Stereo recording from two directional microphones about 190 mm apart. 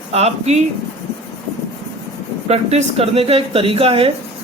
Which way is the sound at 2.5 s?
35° right (ahead or behind).